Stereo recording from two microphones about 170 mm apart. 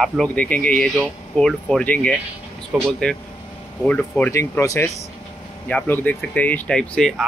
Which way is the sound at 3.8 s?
5° left (ahead or behind).